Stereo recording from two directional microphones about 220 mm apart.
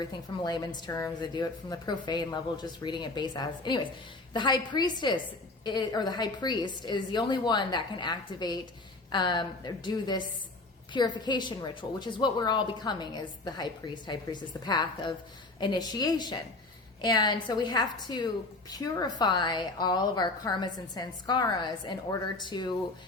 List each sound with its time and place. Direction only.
0.0 s a woman's voice: 20° left (ahead or behind)